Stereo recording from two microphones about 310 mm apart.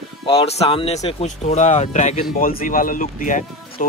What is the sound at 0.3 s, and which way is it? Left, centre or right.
Speech, centre.